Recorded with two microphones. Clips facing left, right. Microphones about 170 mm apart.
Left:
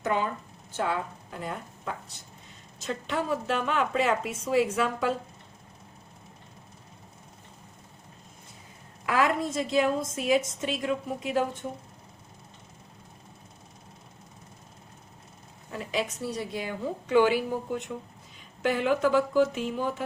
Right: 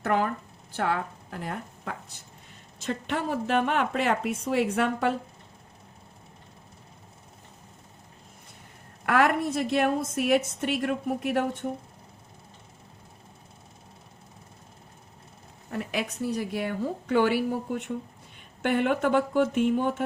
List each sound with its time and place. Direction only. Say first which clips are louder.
0.0 s a woman's voice: right 2 dB; 70° right (ahead or behind)
9.0 s a woman's voice: right 2 dB; 65° right (ahead or behind)
15.7 s a woman's voice: even; 60° right (ahead or behind)